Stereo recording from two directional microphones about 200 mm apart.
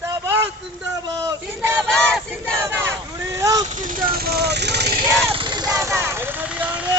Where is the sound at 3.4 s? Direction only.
15° right (ahead or behind).